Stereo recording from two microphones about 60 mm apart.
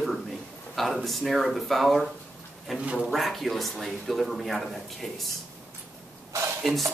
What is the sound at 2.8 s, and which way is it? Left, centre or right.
Speech, centre.